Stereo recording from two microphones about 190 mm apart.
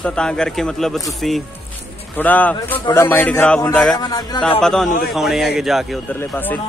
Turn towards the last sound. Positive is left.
turn(degrees=0)  # may be behind; listen again after turning